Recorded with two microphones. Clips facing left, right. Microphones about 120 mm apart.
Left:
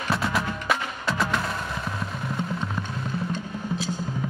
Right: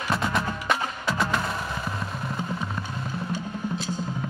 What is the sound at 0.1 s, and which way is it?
Music, centre (ahead or behind).